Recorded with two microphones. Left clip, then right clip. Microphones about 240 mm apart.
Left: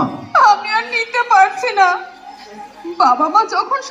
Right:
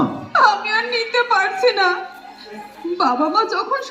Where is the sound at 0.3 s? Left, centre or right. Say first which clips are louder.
Left 3 dB; centre.